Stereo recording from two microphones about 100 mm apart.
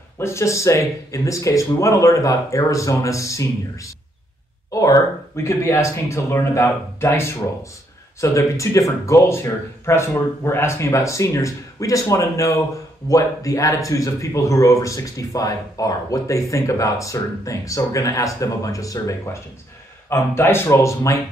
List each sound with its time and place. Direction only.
0.2 s speech: 30° left (ahead or behind)
20.1 s speech: 25° left (ahead or behind)